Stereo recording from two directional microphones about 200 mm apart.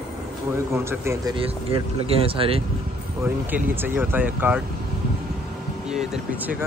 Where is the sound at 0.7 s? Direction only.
10° right (ahead or behind); by 2.6 s 30° right (ahead or behind).